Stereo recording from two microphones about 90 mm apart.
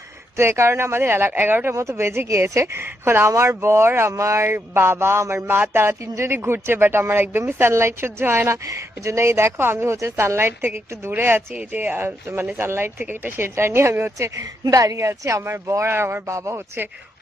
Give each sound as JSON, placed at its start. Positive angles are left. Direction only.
{"t": 0.3, "sound": "speech", "side_deg": -30}
{"t": 14.6, "sound": "speech", "side_deg": -40}